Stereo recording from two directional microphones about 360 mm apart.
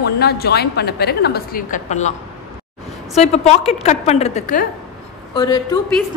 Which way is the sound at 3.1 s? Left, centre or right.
Centre.